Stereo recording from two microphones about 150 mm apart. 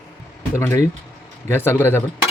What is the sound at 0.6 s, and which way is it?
Speech, 20° left (ahead or behind).